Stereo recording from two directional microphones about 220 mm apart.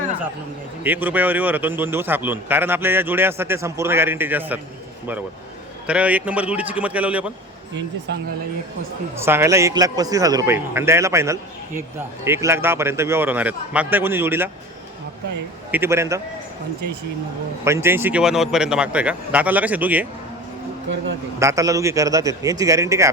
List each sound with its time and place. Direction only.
0.9 s a man's voice: 10° right (ahead or behind)
5.9 s a man's voice: 5° right (ahead or behind)
9.1 s a man's voice: 10° right (ahead or behind)
15.7 s a man's voice: 10° right (ahead or behind)
17.7 s a man's voice: 10° right (ahead or behind)
20.9 s speech: 55° right (ahead or behind)
21.3 s a man's voice: 15° right (ahead or behind)